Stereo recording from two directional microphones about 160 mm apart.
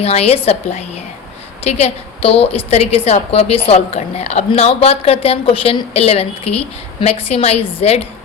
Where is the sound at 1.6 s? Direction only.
40° left (ahead or behind).